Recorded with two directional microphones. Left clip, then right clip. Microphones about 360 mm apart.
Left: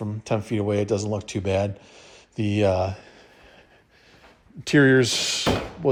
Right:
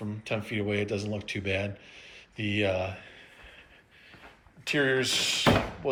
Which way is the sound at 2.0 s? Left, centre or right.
Centre.